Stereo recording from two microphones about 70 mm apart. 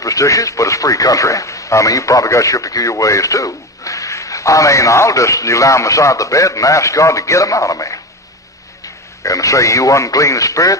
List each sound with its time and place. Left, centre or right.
0.0 s speech: left
9.2 s speech: left